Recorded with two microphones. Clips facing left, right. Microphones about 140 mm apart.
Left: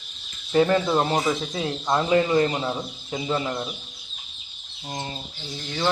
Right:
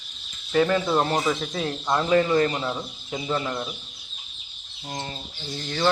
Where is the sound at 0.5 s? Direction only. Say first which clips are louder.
Left 2 dB; 20° left (ahead or behind).